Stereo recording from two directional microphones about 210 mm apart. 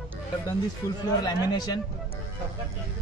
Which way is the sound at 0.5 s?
15° left (ahead or behind).